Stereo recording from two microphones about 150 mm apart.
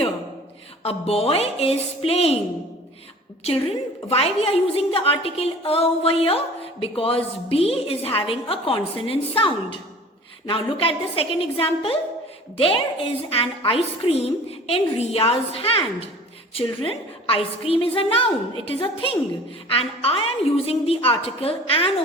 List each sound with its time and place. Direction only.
0.8 s a woman's voice: 40° left (ahead or behind)
4.1 s a woman's voice: 40° left (ahead or behind)